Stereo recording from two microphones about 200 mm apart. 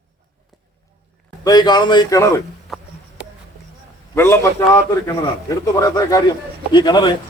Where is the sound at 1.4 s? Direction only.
20° left (ahead or behind).